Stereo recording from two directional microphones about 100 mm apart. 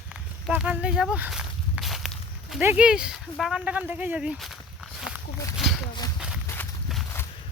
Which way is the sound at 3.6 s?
15° right (ahead or behind).